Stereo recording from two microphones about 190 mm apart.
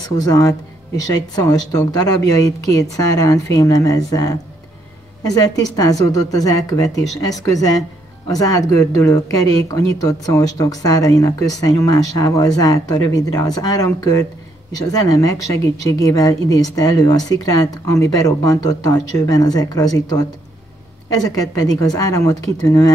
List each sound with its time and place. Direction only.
0.2 s speech: 20° left (ahead or behind)
21.2 s speech: 20° left (ahead or behind)